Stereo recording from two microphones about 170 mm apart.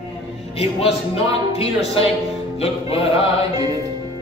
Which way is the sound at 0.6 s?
35° left (ahead or behind).